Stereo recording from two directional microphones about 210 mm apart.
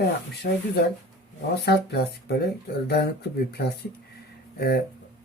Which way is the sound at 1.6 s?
50° left (ahead or behind).